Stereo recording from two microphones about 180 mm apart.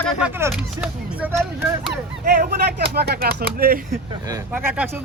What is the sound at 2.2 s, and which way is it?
Speech, 50° right (ahead or behind).